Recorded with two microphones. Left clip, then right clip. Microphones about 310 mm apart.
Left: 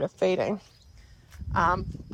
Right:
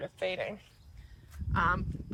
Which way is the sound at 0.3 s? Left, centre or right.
Left.